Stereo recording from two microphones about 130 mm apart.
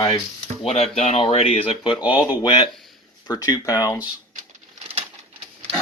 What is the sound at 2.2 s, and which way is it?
Speech, 30° left (ahead or behind).